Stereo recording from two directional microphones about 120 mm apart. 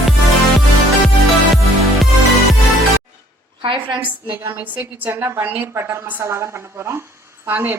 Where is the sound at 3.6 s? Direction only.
45° right (ahead or behind).